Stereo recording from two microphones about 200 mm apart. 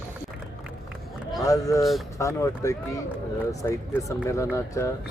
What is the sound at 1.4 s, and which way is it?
A man's voice, 15° left (ahead or behind).